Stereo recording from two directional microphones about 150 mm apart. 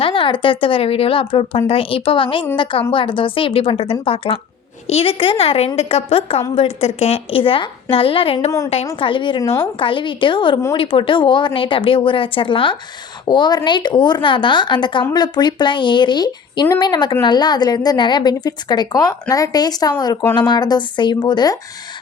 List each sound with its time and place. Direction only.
0.0 s speech: 35° left (ahead or behind)
8.4 s a woman's voice: 20° left (ahead or behind)
9.0 s a woman's voice: 35° left (ahead or behind)